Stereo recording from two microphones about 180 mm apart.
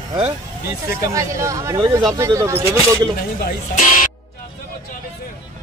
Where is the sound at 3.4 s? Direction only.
45° left (ahead or behind).